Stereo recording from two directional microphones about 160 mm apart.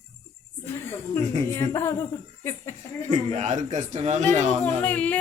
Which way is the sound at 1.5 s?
15° left (ahead or behind).